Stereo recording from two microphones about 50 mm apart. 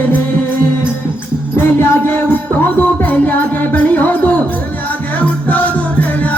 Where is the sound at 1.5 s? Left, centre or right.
Left.